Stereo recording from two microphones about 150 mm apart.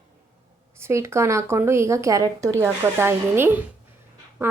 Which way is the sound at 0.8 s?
20° right (ahead or behind).